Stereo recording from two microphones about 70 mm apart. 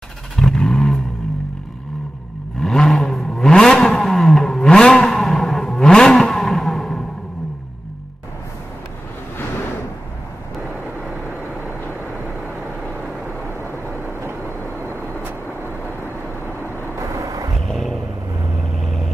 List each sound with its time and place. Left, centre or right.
0.4 s vehicle: centre
2.6 s vehicle: centre
17.0 s vehicle: right
17.6 s vehicle: centre